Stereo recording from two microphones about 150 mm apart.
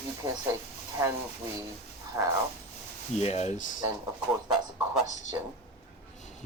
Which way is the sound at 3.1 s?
45° left (ahead or behind).